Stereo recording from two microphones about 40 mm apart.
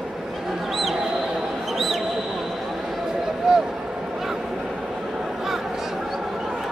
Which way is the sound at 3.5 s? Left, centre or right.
Centre.